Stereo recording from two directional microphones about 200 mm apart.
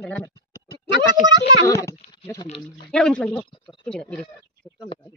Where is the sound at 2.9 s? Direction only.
5° left (ahead or behind).